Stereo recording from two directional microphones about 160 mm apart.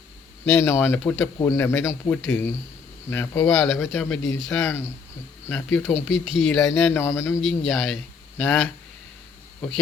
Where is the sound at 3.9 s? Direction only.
5° left (ahead or behind).